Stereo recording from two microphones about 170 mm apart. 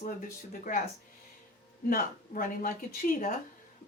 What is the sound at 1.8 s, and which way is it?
Speech, 55° left (ahead or behind).